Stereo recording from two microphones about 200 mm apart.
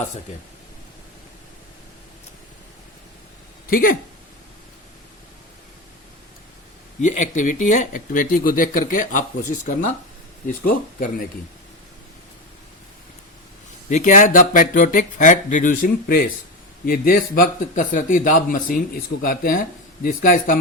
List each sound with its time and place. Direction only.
3.7 s speech: 45° left (ahead or behind)
7.0 s a man's voice: 40° left (ahead or behind)
13.9 s a man's voice: 40° left (ahead or behind)